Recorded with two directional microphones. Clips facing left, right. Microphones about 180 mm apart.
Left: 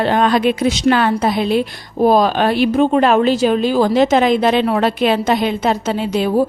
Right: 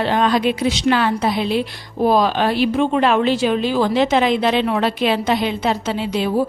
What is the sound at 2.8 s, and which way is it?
A woman's voice, 40° left (ahead or behind).